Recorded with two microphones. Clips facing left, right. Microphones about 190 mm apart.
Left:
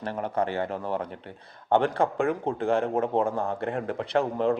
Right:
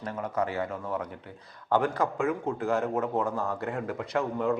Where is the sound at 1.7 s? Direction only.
30° left (ahead or behind).